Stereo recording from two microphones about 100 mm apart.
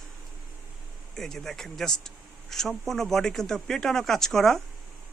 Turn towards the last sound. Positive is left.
turn(degrees=5)  # may be behind; listen again after turning